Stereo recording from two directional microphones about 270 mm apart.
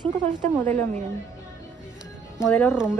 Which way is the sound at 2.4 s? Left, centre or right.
Centre.